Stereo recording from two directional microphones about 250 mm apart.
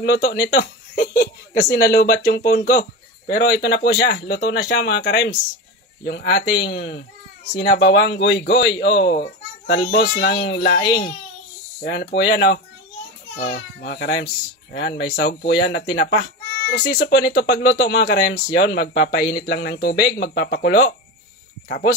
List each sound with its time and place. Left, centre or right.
0.0 s speech: left